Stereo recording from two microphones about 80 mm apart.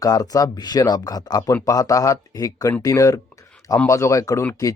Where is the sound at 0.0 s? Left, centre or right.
Left.